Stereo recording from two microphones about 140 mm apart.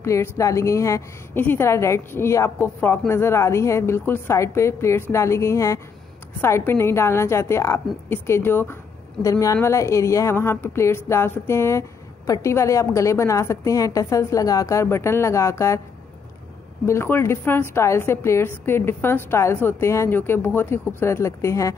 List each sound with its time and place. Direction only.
0.0 s a woman's voice: 20° left (ahead or behind)
16.8 s a woman's voice: 20° left (ahead or behind)